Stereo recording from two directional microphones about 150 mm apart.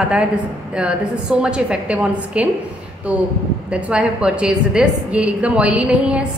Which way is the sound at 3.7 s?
5° right (ahead or behind).